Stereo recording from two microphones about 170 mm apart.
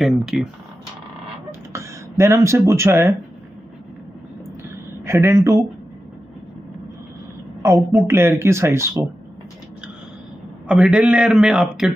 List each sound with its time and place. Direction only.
0.0 s a man's voice: centre (ahead or behind)
1.5 s speech: 15° right (ahead or behind)
5.0 s speech: 15° right (ahead or behind)
7.6 s speech: 15° right (ahead or behind)
10.7 s a man's voice: 5° right (ahead or behind)